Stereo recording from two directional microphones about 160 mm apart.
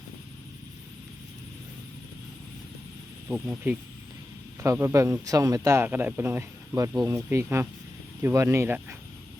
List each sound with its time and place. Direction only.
3.2 s speech: 5° right (ahead or behind)